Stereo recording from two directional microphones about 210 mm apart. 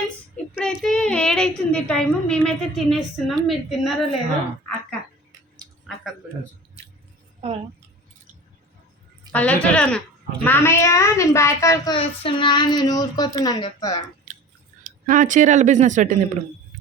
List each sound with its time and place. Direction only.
0.5 s a woman's voice: centre (ahead or behind)
7.4 s speech: 30° right (ahead or behind)
9.3 s a woman's voice: 5° left (ahead or behind)
11.9 s speech: 25° left (ahead or behind)
15.0 s speech: 40° right (ahead or behind)